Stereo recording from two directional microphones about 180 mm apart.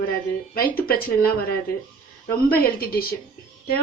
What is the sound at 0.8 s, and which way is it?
Speech, 55° left (ahead or behind).